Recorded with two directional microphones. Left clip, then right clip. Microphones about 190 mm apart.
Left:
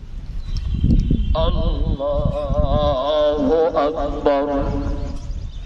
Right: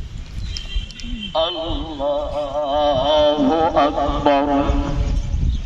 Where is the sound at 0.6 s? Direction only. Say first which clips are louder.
Left 6 dB; 60° left (ahead or behind).